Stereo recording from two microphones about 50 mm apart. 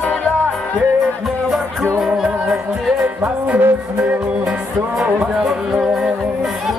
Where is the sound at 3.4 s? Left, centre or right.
Right.